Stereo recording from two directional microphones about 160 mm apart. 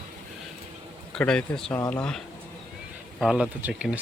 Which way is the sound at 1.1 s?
5° left (ahead or behind).